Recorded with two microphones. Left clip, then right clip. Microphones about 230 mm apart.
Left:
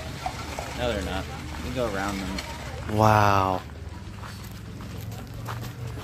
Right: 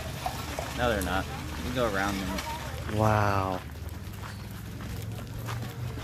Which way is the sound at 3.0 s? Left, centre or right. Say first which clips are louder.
Left 7 dB; left.